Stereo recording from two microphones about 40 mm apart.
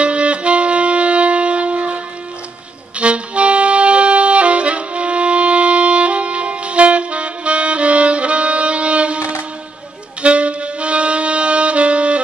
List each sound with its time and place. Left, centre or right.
0.0 s saxophone: right
3.0 s music: right
10.2 s music: right